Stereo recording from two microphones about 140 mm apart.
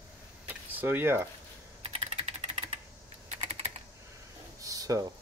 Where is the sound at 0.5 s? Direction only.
15° right (ahead or behind).